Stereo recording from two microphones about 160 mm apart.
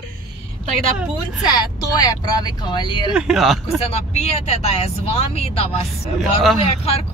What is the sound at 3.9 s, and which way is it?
Speech, 45° left (ahead or behind).